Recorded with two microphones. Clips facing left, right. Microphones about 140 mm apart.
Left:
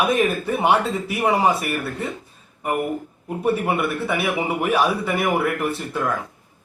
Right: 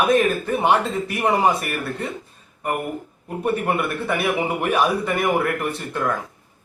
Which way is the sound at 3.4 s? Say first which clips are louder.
Left 1 dB; 5° left (ahead or behind).